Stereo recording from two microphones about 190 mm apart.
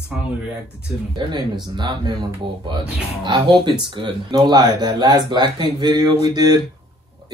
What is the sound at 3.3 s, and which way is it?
Speech, 25° right (ahead or behind).